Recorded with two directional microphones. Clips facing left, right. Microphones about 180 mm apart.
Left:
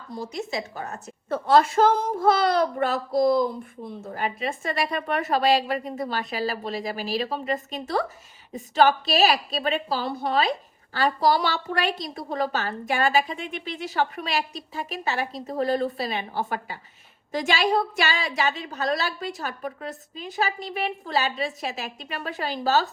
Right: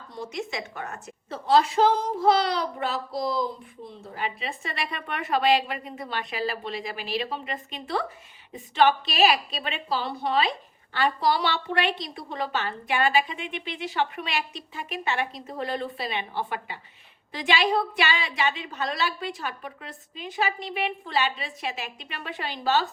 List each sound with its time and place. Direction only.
0.1 s speech: 35° left (ahead or behind)
1.3 s speech: 55° left (ahead or behind)